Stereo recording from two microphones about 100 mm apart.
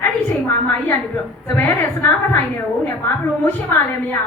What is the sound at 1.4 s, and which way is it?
Speech, 20° left (ahead or behind).